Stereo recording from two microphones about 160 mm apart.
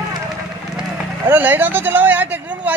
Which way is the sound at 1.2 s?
10° right (ahead or behind).